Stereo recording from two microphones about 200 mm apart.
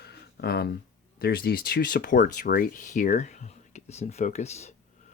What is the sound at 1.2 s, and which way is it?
Speech, 50° left (ahead or behind).